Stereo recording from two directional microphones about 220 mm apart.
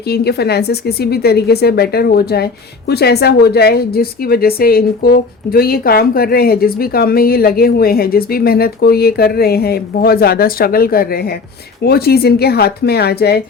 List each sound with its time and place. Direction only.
0.1 s a woman's voice: 45° left (ahead or behind)